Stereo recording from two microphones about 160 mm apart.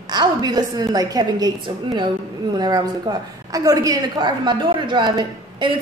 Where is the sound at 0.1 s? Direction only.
25° right (ahead or behind).